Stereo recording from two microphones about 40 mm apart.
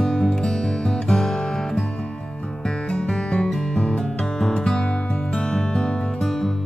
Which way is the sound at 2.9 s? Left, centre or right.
Left.